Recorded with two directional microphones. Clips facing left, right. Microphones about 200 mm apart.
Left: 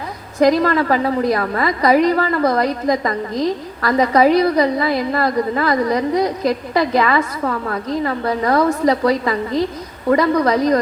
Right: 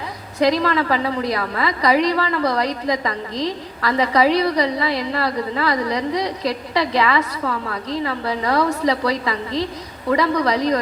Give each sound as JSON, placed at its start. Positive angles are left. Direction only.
{"t": 0.3, "sound": "a woman's voice", "side_deg": 50}